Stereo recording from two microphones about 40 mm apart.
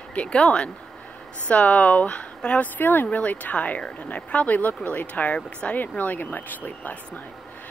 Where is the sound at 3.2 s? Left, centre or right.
Left.